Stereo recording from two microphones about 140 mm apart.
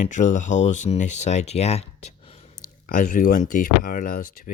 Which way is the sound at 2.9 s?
90° left.